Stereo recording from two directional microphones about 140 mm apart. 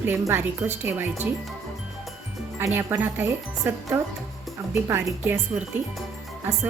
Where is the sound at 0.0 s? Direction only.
15° right (ahead or behind).